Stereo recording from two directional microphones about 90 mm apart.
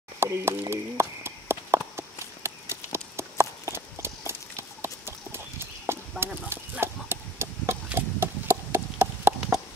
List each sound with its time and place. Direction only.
0.2 s clip-clop: 30° right (ahead or behind)